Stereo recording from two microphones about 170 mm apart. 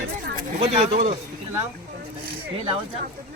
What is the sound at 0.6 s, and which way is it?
Speech, 45° right (ahead or behind).